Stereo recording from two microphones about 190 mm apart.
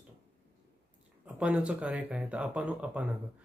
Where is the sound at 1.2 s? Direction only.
5° right (ahead or behind).